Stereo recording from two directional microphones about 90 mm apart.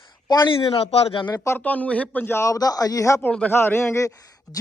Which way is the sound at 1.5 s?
15° left (ahead or behind).